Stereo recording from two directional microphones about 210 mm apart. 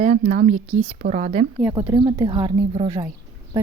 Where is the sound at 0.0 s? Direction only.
35° right (ahead or behind).